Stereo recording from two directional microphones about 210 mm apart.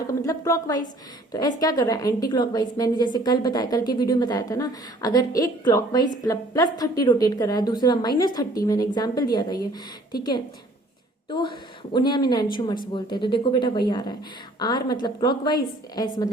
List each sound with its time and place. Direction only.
0.1 s a woman's voice: 15° left (ahead or behind)
11.3 s a woman's voice: 20° left (ahead or behind)